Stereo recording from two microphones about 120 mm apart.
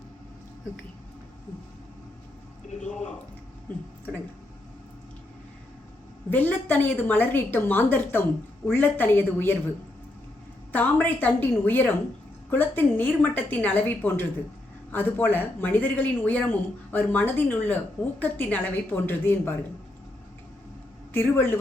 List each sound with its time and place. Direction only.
2.8 s a sound: 80° left
6.3 s speech: 15° left (ahead or behind)
11.0 s speech: 15° left (ahead or behind)
21.1 s a man's voice: 20° left (ahead or behind)